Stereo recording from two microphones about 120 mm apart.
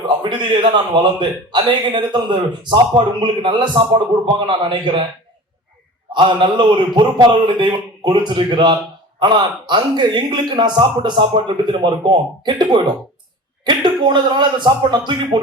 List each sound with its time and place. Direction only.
0.0 s a man's voice: 40° right (ahead or behind)
6.1 s a man's voice: 45° right (ahead or behind)